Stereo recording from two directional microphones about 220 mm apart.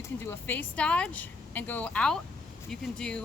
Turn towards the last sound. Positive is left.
turn(degrees=5)  # may be behind; listen again after turning